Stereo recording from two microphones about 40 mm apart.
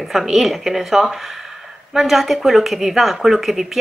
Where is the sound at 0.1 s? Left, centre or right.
Centre.